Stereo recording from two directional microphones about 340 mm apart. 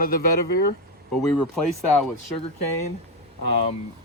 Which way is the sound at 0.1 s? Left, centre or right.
Left.